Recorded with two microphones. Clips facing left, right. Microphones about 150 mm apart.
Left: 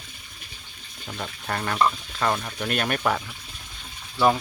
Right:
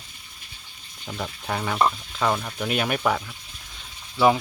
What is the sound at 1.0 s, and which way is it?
Speech, 10° right (ahead or behind).